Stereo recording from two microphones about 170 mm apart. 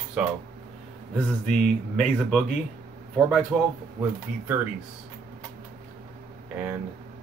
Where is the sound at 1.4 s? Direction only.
Centre (ahead or behind).